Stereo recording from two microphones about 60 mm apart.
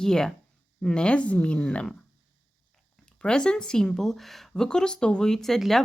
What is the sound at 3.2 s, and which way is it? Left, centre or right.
A woman's voice, centre.